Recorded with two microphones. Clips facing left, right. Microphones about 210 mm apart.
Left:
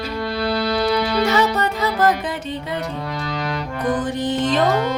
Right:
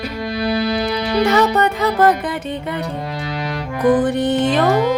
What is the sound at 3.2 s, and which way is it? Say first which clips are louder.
Music: right 1 dB; 5° right (ahead or behind).